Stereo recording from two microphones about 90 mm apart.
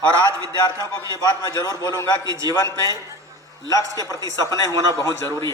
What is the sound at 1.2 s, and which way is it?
Speech, 50° left (ahead or behind).